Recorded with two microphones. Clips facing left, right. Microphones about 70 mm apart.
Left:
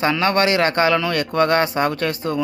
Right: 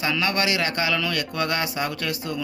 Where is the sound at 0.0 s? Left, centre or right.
Left.